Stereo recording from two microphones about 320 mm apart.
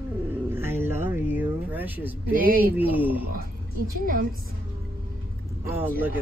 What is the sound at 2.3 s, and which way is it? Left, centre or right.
Speech, right.